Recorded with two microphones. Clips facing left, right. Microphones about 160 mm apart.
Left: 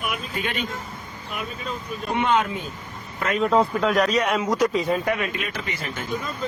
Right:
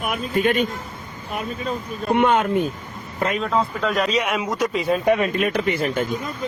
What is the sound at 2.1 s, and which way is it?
Speech, 55° right (ahead or behind).